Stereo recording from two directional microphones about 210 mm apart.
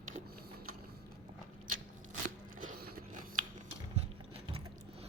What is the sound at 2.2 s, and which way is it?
Biting, 40° right (ahead or behind).